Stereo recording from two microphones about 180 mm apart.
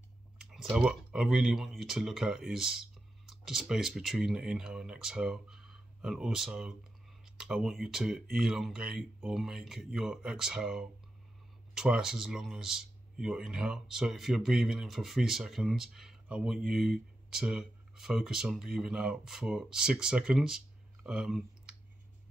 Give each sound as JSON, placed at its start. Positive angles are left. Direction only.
{"t": 0.4, "sound": "speech", "side_deg": 0}